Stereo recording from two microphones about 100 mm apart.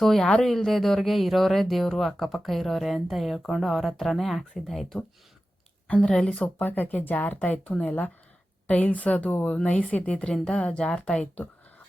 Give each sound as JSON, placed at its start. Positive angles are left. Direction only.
{"t": 0.0, "sound": "speech", "side_deg": 5}